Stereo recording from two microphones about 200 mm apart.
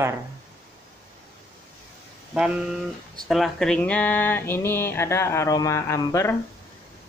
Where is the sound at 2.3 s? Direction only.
5° right (ahead or behind); by 6.3 s 15° left (ahead or behind).